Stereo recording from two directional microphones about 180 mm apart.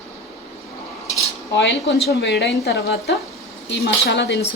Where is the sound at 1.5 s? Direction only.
70° left (ahead or behind).